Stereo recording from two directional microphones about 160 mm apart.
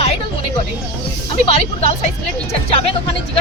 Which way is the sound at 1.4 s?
45° left (ahead or behind).